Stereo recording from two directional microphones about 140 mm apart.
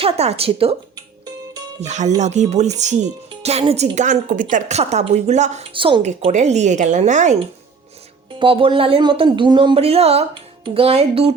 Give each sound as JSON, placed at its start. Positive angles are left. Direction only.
{"t": 0.0, "sound": "a woman's voice", "side_deg": -45}
{"t": 0.9, "sound": "music", "side_deg": -30}
{"t": 1.8, "sound": "speech", "side_deg": -55}
{"t": 4.8, "sound": "a woman's voice", "side_deg": -50}
{"t": 5.7, "sound": "speech", "side_deg": -35}
{"t": 6.0, "sound": "speech", "side_deg": -55}
{"t": 8.4, "sound": "speech", "side_deg": -40}